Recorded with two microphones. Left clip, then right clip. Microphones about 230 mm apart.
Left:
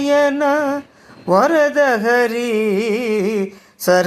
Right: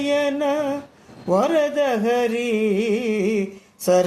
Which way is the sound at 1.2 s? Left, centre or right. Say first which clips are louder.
Left 6 dB; left.